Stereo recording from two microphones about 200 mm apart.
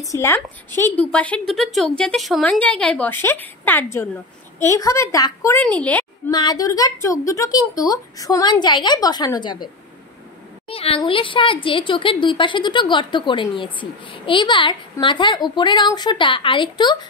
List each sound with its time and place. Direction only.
0.0 s a woman's voice: 15° left (ahead or behind)
5.6 s a woman's voice: 5° left (ahead or behind)
6.3 s a woman's voice: 20° left (ahead or behind)
10.7 s a woman's voice: 30° left (ahead or behind)